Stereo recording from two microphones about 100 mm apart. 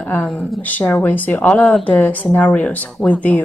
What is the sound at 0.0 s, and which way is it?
Speech, 20° left (ahead or behind).